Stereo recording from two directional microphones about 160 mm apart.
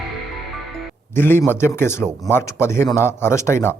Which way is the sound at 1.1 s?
15° left (ahead or behind).